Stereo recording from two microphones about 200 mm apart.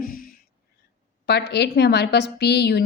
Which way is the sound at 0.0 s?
45° left (ahead or behind).